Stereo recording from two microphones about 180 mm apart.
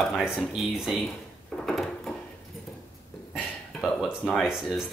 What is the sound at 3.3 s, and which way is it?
Burping, centre (ahead or behind).